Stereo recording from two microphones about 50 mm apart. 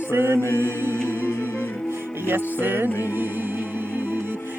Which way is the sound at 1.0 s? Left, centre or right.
Left.